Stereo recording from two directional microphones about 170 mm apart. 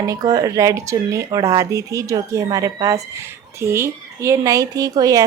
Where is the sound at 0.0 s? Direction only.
20° right (ahead or behind).